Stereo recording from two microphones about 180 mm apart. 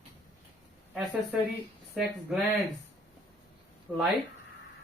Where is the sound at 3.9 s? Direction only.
10° right (ahead or behind).